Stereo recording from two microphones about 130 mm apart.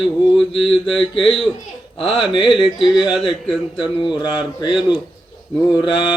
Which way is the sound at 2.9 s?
5° right (ahead or behind).